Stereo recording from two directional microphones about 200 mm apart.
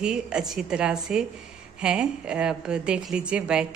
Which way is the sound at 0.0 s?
5° right (ahead or behind).